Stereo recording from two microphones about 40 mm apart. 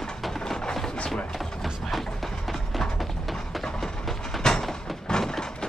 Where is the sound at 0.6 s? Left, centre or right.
Centre.